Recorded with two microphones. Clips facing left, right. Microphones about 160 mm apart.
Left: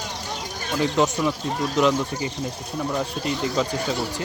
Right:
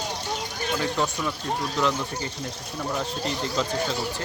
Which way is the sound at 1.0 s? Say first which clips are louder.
Left 6 dB; 15° left (ahead or behind).